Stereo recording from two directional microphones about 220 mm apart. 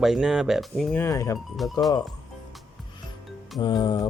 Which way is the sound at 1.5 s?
Centre (ahead or behind).